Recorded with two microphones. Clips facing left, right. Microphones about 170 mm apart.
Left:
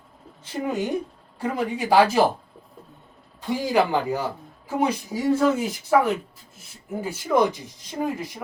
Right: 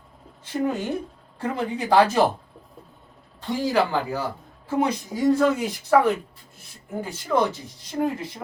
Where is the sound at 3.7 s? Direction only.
15° left (ahead or behind).